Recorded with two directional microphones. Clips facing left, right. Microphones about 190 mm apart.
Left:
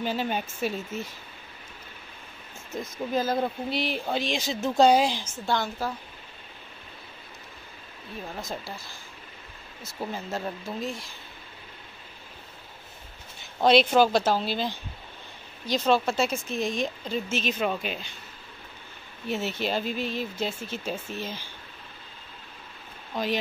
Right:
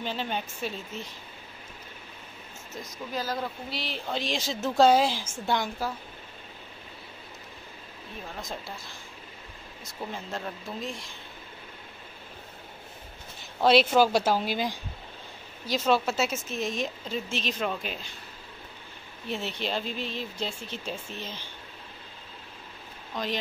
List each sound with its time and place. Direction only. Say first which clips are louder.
0.0 s speech: left 4 dB; 10° left (ahead or behind)
3.3 s speech: left 7 dB; 15° left (ahead or behind)
4.2 s a woman's voice: left 2 dB; centre (ahead or behind); by 5.9 s 15° right (ahead or behind)
8.4 s speech: left 2 dB; centre (ahead or behind)
13.7 s a woman's voice: left 1 dB; 5° right (ahead or behind)
19.2 s speech: left 3 dB; 5° left (ahead or behind)